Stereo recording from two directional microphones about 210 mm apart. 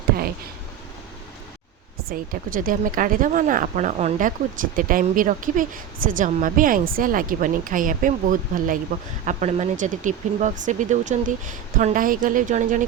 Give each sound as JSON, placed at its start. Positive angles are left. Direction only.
{"t": 2.0, "sound": "speech", "side_deg": -40}